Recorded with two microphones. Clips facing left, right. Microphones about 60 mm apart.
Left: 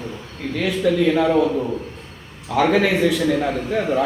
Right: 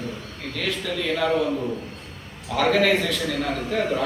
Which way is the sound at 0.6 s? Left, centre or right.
Centre.